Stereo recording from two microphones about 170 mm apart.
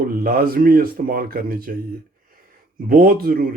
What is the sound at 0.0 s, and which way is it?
Speech, 65° right (ahead or behind).